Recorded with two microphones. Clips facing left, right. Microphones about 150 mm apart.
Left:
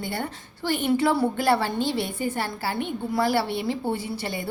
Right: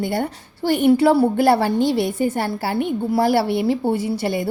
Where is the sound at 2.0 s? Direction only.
40° right (ahead or behind).